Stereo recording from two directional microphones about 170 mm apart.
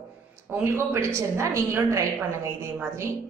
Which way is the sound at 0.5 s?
15° right (ahead or behind).